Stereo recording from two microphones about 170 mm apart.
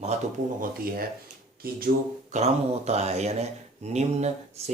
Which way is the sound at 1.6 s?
60° right (ahead or behind).